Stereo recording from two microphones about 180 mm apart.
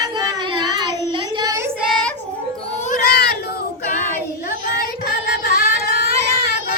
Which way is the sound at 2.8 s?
50° left (ahead or behind).